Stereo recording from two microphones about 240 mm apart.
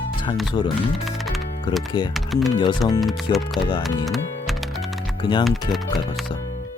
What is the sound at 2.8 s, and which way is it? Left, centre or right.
Speech, centre.